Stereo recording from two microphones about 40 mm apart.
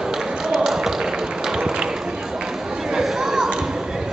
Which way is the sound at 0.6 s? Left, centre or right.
Centre.